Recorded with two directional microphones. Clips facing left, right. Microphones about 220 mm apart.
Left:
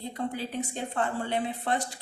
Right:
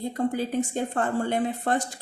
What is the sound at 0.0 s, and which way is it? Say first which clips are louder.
Speech: right 7 dB; 45° right (ahead or behind).